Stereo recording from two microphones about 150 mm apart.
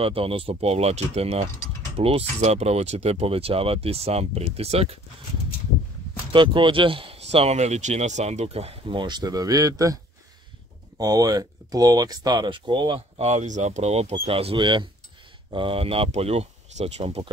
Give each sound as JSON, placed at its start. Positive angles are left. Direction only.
{"t": 0.0, "sound": "speech", "side_deg": -40}
{"t": 6.3, "sound": "speech", "side_deg": -35}
{"t": 11.0, "sound": "speech", "side_deg": -25}